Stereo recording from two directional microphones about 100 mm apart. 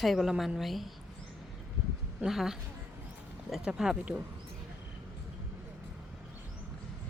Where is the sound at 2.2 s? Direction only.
5° right (ahead or behind).